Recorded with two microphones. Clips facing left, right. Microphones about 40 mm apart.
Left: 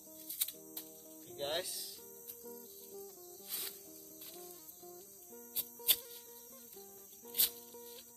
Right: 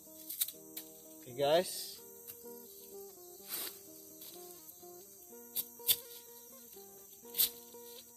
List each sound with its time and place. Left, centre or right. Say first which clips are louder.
1.3 s speech: right 9 dB; right
2.5 s music: even; centre
4.8 s music: even; centre
7.2 s music: even; centre